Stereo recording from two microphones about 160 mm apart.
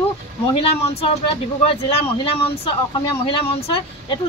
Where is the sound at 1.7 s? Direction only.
35° left (ahead or behind).